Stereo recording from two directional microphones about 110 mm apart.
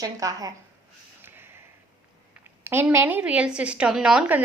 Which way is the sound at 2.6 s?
20° right (ahead or behind).